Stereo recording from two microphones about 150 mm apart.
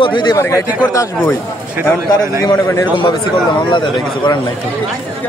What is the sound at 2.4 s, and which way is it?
Speech, 20° left (ahead or behind).